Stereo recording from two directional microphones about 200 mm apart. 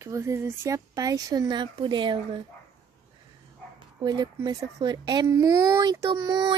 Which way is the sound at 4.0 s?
20° right (ahead or behind).